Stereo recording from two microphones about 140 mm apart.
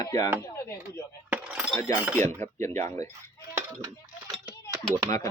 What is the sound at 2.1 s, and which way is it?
Speech, 20° left (ahead or behind).